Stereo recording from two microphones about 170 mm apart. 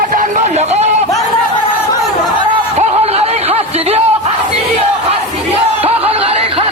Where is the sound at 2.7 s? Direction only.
35° right (ahead or behind).